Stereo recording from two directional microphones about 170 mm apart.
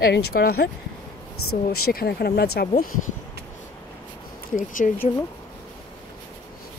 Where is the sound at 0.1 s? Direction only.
65° left (ahead or behind).